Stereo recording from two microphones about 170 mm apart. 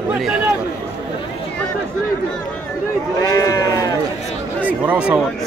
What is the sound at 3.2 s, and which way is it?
Speech, 20° left (ahead or behind).